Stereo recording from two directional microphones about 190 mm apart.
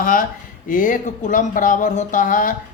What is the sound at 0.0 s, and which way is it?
Speech, 45° left (ahead or behind).